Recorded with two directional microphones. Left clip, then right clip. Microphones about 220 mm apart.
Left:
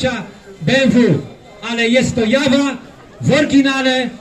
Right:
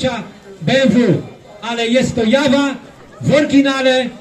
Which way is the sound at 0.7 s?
25° left (ahead or behind).